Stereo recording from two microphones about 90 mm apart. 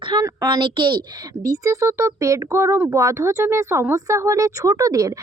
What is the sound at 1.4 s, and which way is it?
Speech, 40° right (ahead or behind).